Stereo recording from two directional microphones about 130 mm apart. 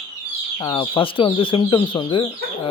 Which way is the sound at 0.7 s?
40° left (ahead or behind).